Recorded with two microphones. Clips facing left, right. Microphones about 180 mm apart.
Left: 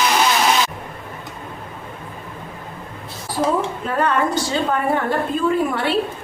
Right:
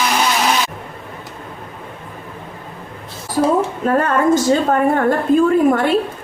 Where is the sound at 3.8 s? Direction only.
45° right (ahead or behind).